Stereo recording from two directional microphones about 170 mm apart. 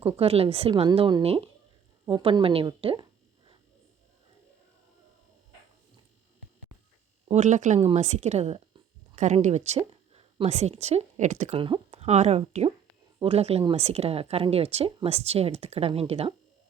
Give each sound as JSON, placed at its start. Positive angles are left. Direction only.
{"t": 0.2, "sound": "a woman's voice", "side_deg": -35}
{"t": 7.3, "sound": "speech", "side_deg": -45}